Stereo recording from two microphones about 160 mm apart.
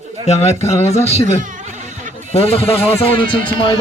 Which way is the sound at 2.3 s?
40° left (ahead or behind).